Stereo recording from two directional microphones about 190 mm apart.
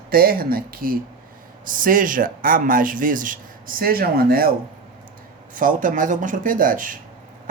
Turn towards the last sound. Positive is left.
turn(degrees=-45)  # may be behind; listen again after turning